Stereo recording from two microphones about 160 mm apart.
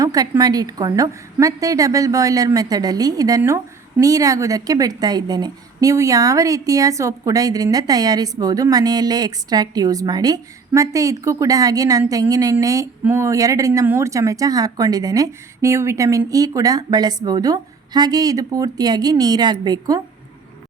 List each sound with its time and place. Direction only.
0.0 s a woman's voice: 20° right (ahead or behind)